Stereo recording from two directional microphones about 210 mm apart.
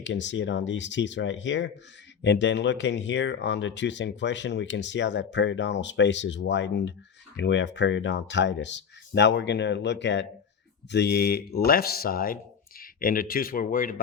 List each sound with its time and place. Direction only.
0.0 s speech: 60° left (ahead or behind); by 13.9 s 40° left (ahead or behind)